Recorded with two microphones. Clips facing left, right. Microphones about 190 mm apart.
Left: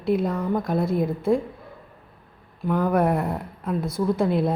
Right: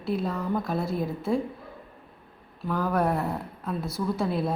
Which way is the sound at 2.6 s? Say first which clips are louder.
Left 5 dB; 20° left (ahead or behind).